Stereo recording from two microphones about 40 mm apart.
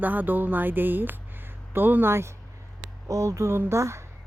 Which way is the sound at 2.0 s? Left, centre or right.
Right.